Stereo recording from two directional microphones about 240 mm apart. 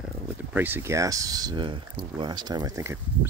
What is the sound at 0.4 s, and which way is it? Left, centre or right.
Speech, centre.